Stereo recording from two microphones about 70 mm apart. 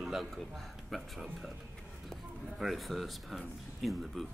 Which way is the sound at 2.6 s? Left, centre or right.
Centre.